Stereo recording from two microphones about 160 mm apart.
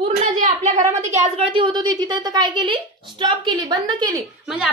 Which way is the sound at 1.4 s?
30° right (ahead or behind).